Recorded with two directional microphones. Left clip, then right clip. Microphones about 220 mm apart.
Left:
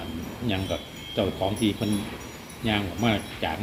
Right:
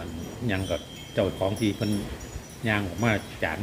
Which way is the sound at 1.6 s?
30° right (ahead or behind).